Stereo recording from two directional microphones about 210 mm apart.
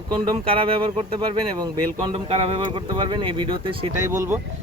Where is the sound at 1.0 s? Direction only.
20° right (ahead or behind).